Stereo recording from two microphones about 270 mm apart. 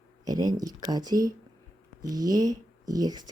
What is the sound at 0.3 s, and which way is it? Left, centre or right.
Speech, centre.